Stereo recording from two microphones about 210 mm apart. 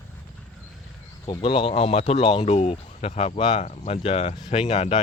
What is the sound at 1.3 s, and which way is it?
Speech, 25° left (ahead or behind).